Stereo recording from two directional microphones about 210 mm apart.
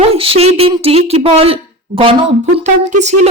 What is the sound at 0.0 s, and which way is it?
A woman's voice, 25° right (ahead or behind).